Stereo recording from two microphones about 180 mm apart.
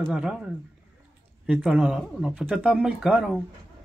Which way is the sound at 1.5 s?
5° right (ahead or behind).